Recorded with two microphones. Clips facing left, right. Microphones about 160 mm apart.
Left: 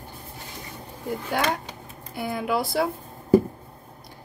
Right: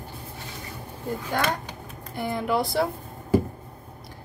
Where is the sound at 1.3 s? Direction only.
10° left (ahead or behind).